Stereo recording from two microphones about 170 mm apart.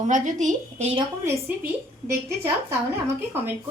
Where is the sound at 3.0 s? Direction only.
15° right (ahead or behind).